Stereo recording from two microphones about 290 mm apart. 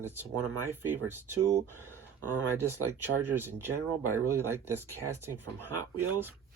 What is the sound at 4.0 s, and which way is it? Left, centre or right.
Speech, right.